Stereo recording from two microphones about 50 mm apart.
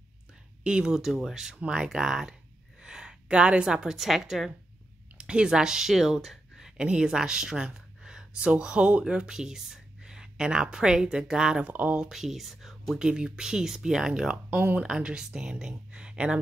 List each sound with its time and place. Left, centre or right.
0.7 s a woman's voice: centre
5.1 s speech: centre
6.8 s speech: centre
11.6 s speech: right
11.9 s speech: centre